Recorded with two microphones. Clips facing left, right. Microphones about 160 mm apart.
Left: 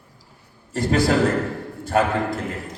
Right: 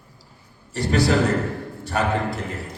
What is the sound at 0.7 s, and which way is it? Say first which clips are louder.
A man's voice: left 1 dB; 50° left (ahead or behind).